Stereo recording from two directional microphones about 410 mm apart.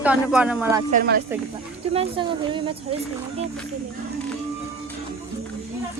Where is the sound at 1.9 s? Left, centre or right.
Centre.